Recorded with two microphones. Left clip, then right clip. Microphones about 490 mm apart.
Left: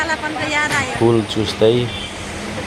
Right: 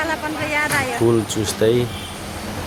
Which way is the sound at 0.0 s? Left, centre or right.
Centre.